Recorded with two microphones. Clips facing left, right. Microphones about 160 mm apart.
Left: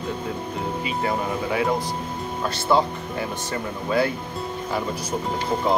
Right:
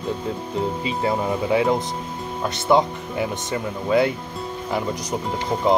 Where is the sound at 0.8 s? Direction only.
25° right (ahead or behind).